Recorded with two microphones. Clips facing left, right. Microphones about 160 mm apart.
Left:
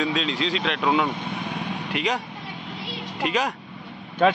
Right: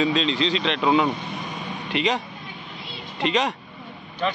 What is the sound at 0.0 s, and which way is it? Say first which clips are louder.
Speech: right 3 dB; 5° left (ahead or behind).